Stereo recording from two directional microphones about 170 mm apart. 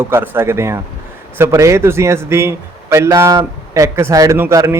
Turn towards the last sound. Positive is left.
turn(degrees=-15)  # may be behind; listen again after turning